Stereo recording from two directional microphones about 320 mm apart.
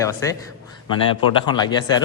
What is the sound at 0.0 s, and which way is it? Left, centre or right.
Speech, centre.